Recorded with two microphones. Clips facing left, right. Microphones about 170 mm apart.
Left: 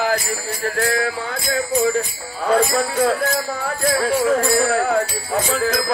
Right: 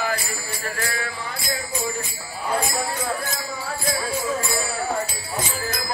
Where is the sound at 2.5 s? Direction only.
85° left.